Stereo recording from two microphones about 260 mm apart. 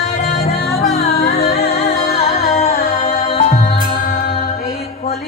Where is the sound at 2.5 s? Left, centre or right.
Left.